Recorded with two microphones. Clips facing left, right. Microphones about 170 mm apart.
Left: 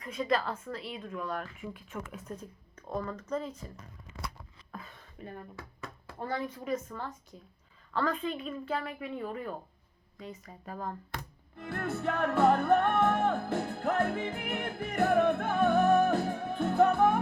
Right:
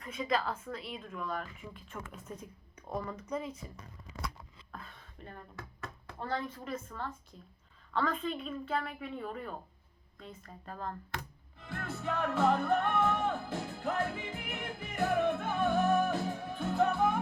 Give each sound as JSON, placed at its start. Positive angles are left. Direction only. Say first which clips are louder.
{"t": 0.0, "sound": "speech", "louder": "left 3 dB", "side_deg": 0}
{"t": 3.0, "sound": "speech", "louder": "left 3 dB", "side_deg": -10}
{"t": 4.7, "sound": "a sound", "louder": "left 3 dB", "side_deg": 5}
{"t": 6.1, "sound": "speech", "louder": "left 2 dB", "side_deg": 10}
{"t": 11.5, "sound": "music", "louder": "left 6 dB", "side_deg": 60}